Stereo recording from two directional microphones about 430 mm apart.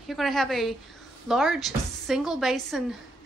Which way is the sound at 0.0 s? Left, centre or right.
Centre.